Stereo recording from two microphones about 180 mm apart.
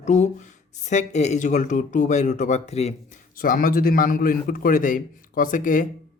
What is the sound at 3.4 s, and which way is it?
Speech, 50° left (ahead or behind).